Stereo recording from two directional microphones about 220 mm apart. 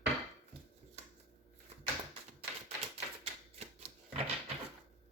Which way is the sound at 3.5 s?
30° right (ahead or behind).